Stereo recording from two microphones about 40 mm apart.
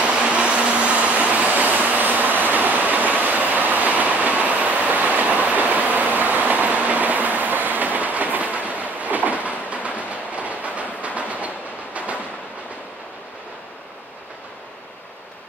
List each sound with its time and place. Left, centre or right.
0.0 s vehicle: right